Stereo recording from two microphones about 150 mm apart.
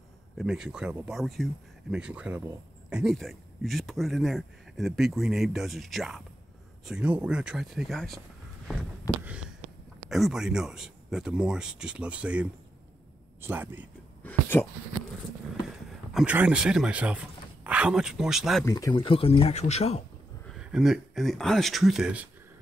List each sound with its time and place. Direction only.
0.4 s speech: 5° right (ahead or behind)
10.0 s speech: centre (ahead or behind)
14.2 s a sound: 15° left (ahead or behind)
16.1 s speech: centre (ahead or behind)
18.7 s speech: 25° left (ahead or behind); by 20.0 s 45° left (ahead or behind)
20.4 s speech: 5° right (ahead or behind)